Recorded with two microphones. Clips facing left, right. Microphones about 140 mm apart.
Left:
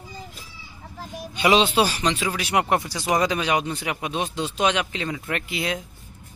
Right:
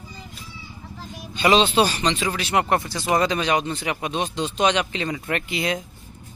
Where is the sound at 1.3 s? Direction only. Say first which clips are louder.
Right 1 dB; 10° left (ahead or behind).